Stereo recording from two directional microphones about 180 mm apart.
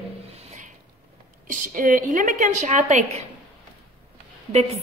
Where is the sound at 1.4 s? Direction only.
45° right (ahead or behind).